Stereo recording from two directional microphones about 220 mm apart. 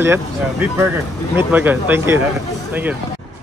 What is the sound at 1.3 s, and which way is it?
Speech, 10° right (ahead or behind).